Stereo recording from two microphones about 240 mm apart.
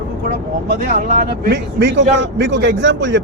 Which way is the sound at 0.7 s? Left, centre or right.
Right.